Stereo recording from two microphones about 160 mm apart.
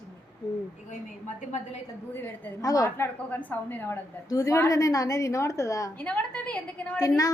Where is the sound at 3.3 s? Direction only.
10° left (ahead or behind).